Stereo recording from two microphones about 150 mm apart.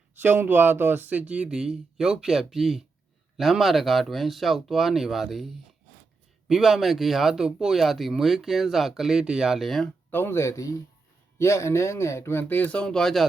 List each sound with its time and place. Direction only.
0.1 s speech: 15° right (ahead or behind)
6.5 s speech: centre (ahead or behind)
10.1 s speech: 15° left (ahead or behind)